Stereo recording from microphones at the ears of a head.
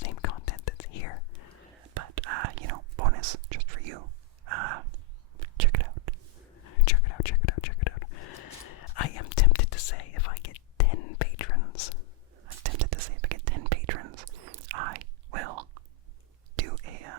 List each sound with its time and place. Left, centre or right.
0.0 s whispering: left
1.8 s whispering: right
6.5 s whispering: left
12.3 s whispering: right